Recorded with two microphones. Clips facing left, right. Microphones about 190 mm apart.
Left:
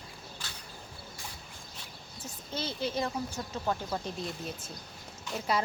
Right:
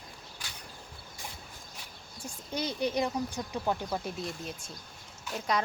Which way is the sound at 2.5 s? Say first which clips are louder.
Right 3 dB; 15° right (ahead or behind).